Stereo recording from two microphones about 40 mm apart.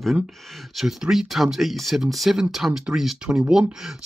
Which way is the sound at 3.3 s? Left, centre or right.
Centre.